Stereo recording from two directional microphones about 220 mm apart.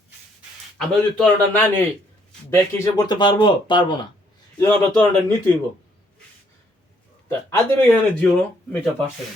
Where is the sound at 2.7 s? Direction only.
20° left (ahead or behind).